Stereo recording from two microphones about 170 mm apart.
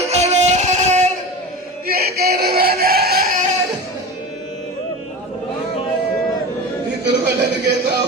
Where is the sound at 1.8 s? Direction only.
65° right (ahead or behind).